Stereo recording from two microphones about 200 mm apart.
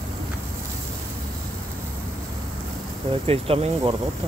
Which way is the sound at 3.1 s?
30° right (ahead or behind).